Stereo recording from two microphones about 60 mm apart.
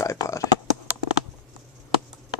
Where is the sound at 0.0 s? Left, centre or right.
Left.